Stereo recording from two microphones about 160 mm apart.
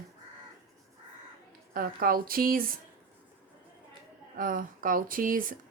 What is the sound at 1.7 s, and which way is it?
Speech, 65° right (ahead or behind).